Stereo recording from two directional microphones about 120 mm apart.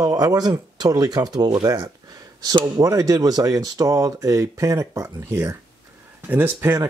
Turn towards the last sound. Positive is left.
turn(degrees=-20)  # may be behind; listen again after turning